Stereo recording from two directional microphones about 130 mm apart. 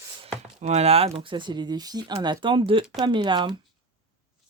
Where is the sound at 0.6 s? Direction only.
55° right (ahead or behind); by 3.6 s 35° right (ahead or behind).